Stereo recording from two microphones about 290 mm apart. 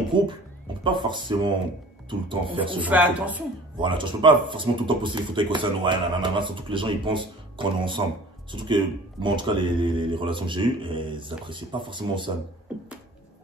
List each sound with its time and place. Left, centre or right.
0.1 s speech: centre
2.8 s speech: centre
3.7 s speech: centre